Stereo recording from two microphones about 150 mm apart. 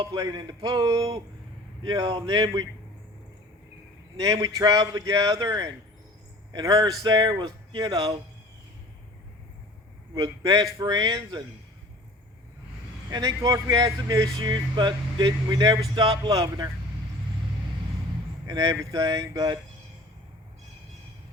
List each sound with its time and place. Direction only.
0.0 s speech: 25° right (ahead or behind)
4.2 s speech: 25° right (ahead or behind)
10.2 s speech: 25° right (ahead or behind)
13.1 s speech: 25° right (ahead or behind)
18.4 s speech: 25° right (ahead or behind)